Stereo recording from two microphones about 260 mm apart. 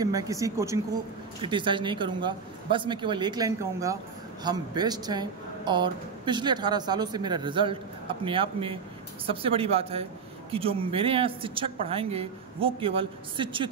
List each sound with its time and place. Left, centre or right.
0.0 s speech: centre